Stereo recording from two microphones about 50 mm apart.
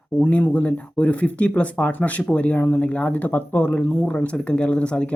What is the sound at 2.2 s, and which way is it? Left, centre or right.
Speech, centre.